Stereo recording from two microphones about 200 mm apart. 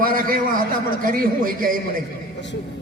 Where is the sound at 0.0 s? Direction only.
45° right (ahead or behind).